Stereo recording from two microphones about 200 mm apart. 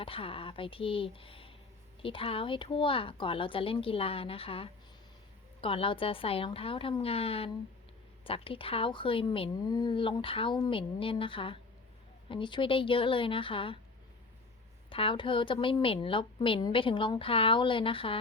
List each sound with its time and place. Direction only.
0.0 s a woman's voice: 25° left (ahead or behind)
14.8 s a woman's voice: 25° left (ahead or behind)